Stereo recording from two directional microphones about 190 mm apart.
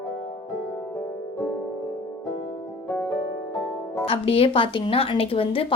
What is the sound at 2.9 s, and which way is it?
Music, 10° left (ahead or behind).